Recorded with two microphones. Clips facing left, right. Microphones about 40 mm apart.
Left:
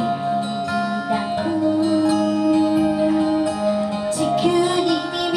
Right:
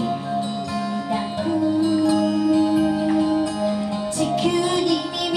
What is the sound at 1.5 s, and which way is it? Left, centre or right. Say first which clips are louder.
Music: even; centre.